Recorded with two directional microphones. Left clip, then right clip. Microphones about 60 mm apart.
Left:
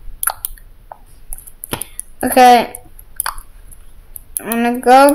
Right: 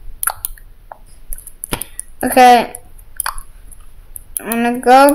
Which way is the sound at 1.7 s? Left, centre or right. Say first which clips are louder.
Right 1 dB; right.